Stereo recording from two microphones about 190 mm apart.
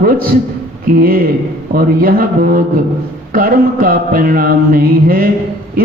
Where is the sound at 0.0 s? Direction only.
50° right (ahead or behind).